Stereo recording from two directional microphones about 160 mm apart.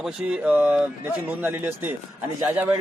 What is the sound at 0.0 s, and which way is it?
Speech, 5° right (ahead or behind).